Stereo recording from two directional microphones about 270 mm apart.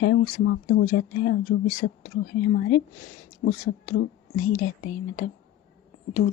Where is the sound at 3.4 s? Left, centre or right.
Left.